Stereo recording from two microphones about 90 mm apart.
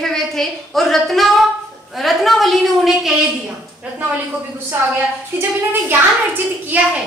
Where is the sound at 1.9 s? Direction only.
Centre (ahead or behind).